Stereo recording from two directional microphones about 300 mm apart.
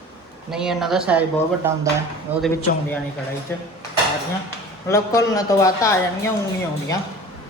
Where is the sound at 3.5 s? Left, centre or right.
Centre.